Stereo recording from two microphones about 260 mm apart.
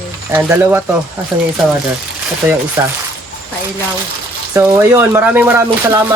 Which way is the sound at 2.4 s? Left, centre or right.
Centre.